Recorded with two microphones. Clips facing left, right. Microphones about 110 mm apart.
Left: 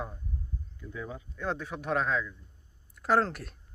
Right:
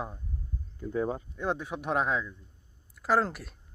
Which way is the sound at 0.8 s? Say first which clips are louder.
Right 10 dB; 40° right (ahead or behind).